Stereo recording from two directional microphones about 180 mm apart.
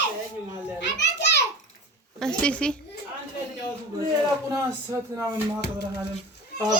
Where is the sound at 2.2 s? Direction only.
5° left (ahead or behind).